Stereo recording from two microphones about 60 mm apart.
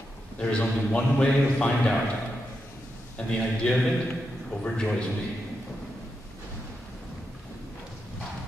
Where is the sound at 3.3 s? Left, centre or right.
Centre.